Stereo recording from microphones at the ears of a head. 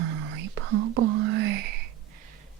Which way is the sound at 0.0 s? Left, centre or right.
Right.